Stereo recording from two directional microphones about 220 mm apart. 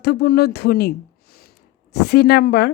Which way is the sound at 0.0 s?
45° left (ahead or behind).